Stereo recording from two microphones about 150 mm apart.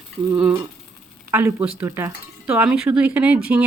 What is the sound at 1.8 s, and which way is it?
Speech, 20° right (ahead or behind).